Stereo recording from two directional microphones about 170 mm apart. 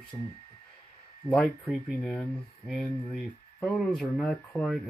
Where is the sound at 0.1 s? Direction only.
15° left (ahead or behind).